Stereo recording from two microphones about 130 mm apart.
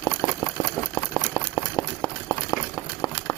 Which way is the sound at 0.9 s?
20° left (ahead or behind).